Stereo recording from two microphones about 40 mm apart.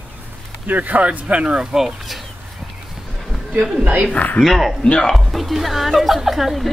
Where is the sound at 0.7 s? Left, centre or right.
Right.